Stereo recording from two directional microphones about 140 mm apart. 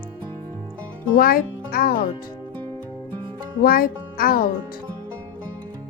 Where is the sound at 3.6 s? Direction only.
90° left.